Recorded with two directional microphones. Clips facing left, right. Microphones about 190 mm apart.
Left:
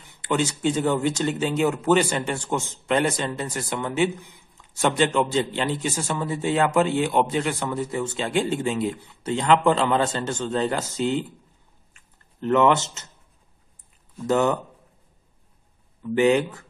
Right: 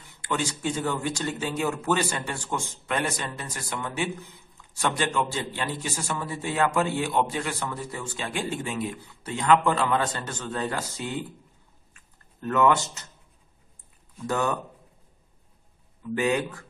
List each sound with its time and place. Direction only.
0.0 s speech: 20° left (ahead or behind)
11.9 s a sound: 25° left (ahead or behind)
14.2 s speech: 20° left (ahead or behind)
16.2 s speech: 25° left (ahead or behind)